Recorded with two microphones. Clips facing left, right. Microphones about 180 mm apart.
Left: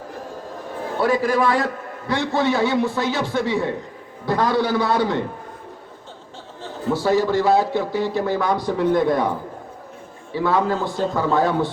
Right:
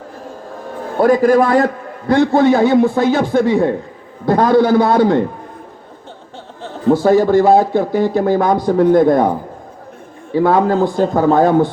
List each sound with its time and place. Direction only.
0.9 s a man's voice: 50° right (ahead or behind)
6.8 s a man's voice: 50° right (ahead or behind)
10.3 s a man's voice: 50° right (ahead or behind)